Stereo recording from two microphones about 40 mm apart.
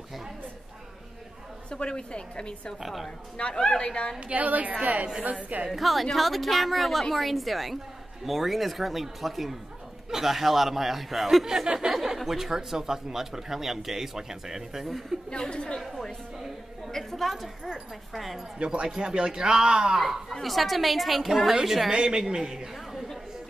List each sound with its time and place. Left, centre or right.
1.7 s a woman's voice: left
2.8 s a woman's voice: centre
3.3 s a woman's voice: left
4.3 s a woman's voice: right
5.7 s a woman's voice: centre
11.4 s speech: centre
11.9 s speech: centre
15.5 s a woman's voice: left
16.9 s a woman's voice: centre
18.6 s speech: right
20.4 s a woman's voice: centre